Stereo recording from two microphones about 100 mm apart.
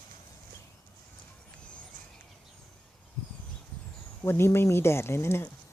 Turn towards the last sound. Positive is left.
turn(degrees=25)  # may be behind; listen again after turning